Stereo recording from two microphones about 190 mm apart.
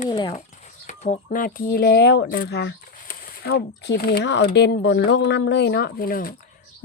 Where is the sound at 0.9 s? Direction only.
45° left (ahead or behind).